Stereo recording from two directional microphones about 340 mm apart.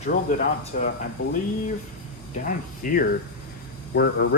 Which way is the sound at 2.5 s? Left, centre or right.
Left.